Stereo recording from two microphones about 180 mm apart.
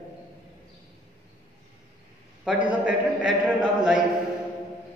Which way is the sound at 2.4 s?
5° right (ahead or behind).